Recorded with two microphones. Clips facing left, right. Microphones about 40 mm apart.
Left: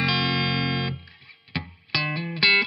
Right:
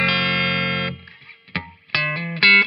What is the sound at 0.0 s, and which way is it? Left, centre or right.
Music, right.